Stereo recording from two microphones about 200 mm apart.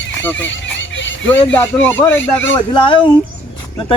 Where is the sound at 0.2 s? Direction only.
10° left (ahead or behind).